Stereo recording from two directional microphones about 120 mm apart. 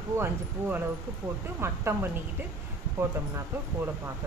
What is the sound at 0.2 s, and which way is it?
Speech, 15° right (ahead or behind).